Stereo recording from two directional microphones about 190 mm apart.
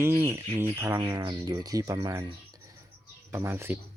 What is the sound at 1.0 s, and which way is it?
Speech, 25° right (ahead or behind).